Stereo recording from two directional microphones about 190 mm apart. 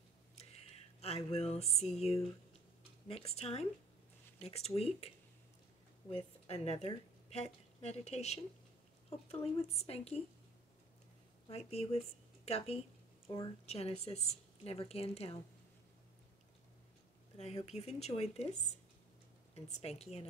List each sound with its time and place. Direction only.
1.0 s speech: 30° left (ahead or behind)
6.4 s speech: 35° left (ahead or behind)
11.4 s speech: 35° left (ahead or behind)
17.6 s speech: 35° left (ahead or behind)
19.5 s speech: 35° left (ahead or behind)